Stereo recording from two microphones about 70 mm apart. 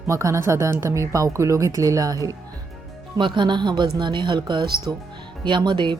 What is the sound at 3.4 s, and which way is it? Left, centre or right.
Speech, right.